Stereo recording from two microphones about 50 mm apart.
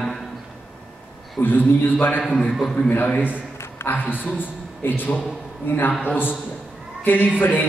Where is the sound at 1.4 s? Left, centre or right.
Left.